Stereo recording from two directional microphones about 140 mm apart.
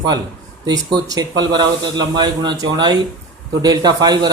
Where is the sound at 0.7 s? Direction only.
25° right (ahead or behind).